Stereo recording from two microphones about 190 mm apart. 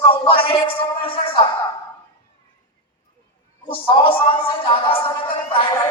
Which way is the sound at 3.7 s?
25° left (ahead or behind).